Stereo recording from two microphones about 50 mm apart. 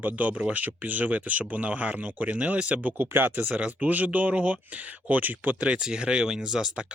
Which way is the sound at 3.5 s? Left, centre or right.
Right.